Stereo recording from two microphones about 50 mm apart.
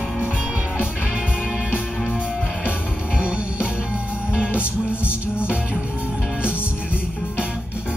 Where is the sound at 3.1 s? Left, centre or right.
Centre.